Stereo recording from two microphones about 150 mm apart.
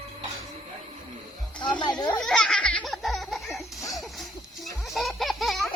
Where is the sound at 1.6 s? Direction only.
30° left (ahead or behind).